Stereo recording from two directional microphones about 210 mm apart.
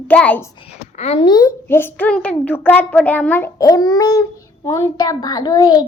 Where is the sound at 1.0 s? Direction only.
25° left (ahead or behind).